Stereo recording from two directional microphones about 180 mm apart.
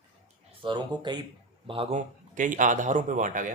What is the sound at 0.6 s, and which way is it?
A man's voice, 25° right (ahead or behind).